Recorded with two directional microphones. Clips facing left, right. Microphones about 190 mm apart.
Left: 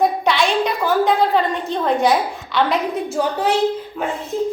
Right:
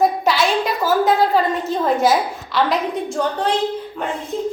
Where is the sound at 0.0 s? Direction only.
Centre (ahead or behind).